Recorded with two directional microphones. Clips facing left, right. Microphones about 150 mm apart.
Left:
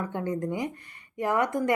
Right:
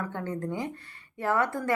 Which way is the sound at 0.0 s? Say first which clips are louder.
Left 3 dB; 15° left (ahead or behind).